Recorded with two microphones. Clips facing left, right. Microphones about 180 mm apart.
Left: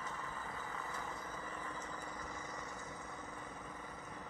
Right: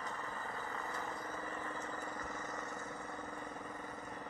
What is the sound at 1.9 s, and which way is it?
Vehicle, 50° right (ahead or behind).